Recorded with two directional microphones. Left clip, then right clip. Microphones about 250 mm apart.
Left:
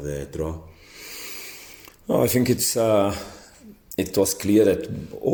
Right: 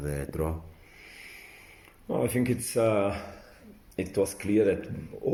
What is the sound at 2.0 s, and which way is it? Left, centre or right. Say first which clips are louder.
Speech: left 8 dB; left.